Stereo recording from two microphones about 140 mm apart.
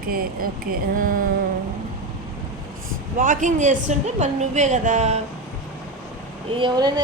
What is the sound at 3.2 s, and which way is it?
A woman's voice, 65° right (ahead or behind).